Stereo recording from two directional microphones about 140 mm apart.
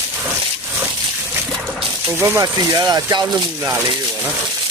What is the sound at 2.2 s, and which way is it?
Speech, 20° right (ahead or behind).